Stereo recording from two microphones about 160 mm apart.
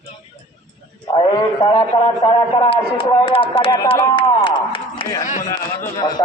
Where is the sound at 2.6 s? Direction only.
30° left (ahead or behind).